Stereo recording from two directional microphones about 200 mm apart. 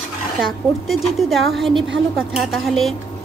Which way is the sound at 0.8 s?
Centre (ahead or behind).